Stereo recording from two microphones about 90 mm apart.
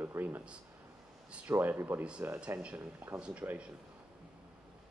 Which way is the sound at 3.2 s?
15° right (ahead or behind).